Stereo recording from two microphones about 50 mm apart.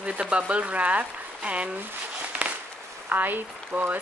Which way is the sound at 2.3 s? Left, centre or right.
Right.